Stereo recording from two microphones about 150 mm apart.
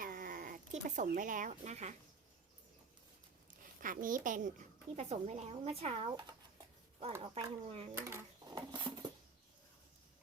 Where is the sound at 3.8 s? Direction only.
65° right (ahead or behind).